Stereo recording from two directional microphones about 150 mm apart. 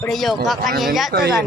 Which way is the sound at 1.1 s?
90° right.